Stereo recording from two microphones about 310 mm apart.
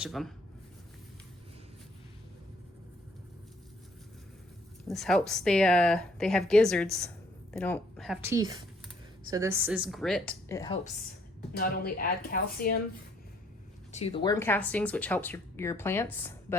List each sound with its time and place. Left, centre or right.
0.0 s a woman's voice: centre
4.9 s a woman's voice: centre
11.5 s speech: left
13.9 s speech: centre